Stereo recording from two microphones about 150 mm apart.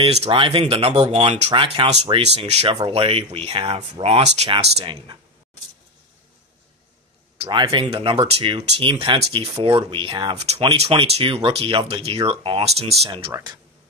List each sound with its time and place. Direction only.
0.0 s speech: 40° right (ahead or behind)
1.5 s speech: 35° right (ahead or behind)
7.3 s speech: 35° right (ahead or behind)
10.3 s speech: 45° right (ahead or behind)